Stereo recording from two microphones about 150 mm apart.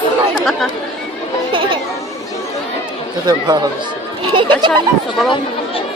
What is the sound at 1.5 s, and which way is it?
Chatter, 35° right (ahead or behind).